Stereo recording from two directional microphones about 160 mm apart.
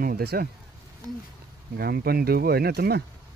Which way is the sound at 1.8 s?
75° right (ahead or behind).